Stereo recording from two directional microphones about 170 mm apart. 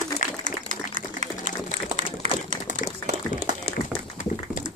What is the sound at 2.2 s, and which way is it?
Typewriter, 45° right (ahead or behind).